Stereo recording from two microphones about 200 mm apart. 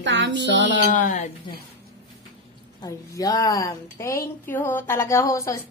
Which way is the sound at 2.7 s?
20° left (ahead or behind).